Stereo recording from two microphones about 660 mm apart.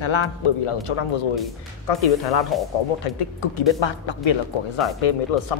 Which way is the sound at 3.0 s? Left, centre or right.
Left.